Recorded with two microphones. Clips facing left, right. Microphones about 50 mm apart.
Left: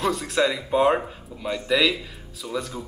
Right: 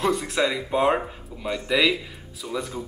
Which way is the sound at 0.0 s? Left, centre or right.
Centre.